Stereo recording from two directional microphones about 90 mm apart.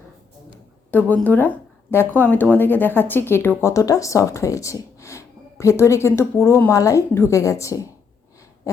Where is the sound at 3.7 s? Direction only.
40° left (ahead or behind).